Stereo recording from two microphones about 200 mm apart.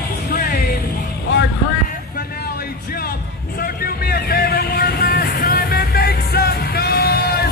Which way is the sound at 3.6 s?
50° left (ahead or behind).